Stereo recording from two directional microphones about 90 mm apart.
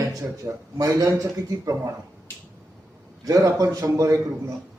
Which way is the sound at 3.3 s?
40° right (ahead or behind).